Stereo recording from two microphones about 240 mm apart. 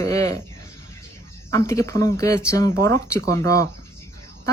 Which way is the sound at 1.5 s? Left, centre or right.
Centre.